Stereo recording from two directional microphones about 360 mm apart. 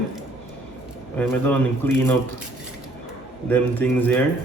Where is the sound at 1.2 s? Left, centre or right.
Centre.